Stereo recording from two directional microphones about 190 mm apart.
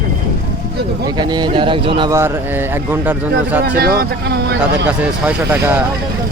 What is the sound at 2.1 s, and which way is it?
A man's voice, 10° right (ahead or behind).